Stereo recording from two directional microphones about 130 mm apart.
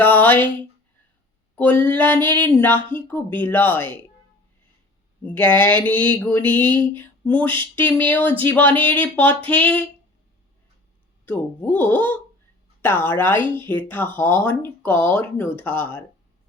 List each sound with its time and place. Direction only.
0.0 s speech: 15° left (ahead or behind)
1.5 s speech: 15° left (ahead or behind)
5.2 s speech: 15° left (ahead or behind)
11.3 s speech: 15° left (ahead or behind)